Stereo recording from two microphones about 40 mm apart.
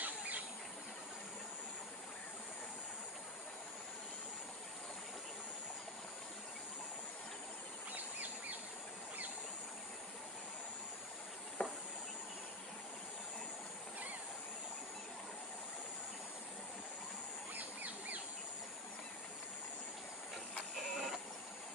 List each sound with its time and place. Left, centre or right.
0.0 s bird: right
7.9 s a sound: right
11.6 s insect: left
17.5 s bird: right
20.7 s printer: centre